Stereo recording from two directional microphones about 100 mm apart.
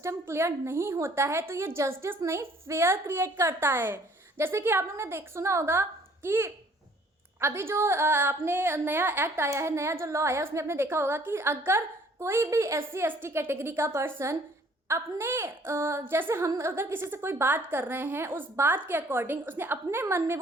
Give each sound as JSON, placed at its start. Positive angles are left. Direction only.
{"t": 0.0, "sound": "a woman's voice", "side_deg": -25}